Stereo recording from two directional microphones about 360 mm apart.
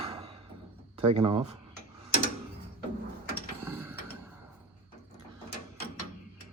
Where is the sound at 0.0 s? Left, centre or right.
Centre.